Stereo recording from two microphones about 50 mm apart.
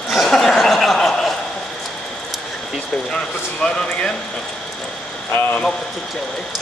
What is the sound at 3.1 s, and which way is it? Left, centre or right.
Speech, centre.